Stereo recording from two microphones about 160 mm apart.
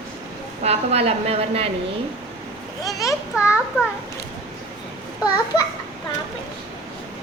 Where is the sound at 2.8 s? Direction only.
20° left (ahead or behind).